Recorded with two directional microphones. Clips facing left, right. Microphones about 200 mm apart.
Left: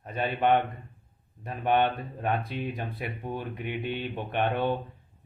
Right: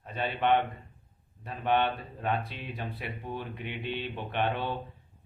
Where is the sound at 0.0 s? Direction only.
45° left (ahead or behind).